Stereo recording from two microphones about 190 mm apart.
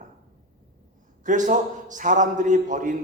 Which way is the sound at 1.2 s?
40° right (ahead or behind).